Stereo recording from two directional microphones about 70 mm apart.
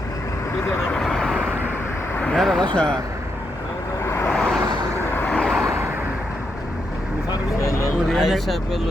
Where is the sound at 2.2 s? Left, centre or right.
Centre.